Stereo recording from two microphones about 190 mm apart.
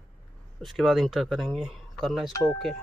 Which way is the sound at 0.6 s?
Centre (ahead or behind).